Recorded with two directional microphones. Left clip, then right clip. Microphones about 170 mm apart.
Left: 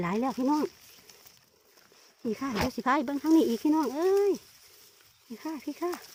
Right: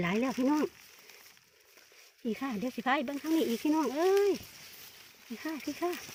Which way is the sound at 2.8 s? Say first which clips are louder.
Left 3 dB; 25° left (ahead or behind).